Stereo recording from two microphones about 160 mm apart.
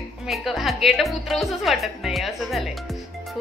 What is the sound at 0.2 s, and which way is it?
Speech, centre (ahead or behind).